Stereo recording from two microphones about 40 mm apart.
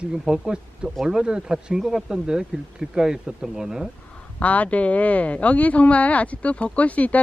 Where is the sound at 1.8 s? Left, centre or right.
Centre.